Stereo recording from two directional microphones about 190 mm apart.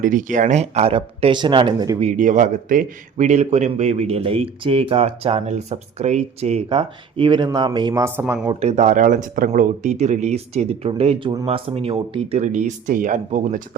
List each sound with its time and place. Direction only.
0.0 s speech: 45° right (ahead or behind); by 2.0 s 25° right (ahead or behind)
2.0 s speech: 40° right (ahead or behind); by 8.4 s 15° right (ahead or behind)
8.6 s speech: 35° right (ahead or behind)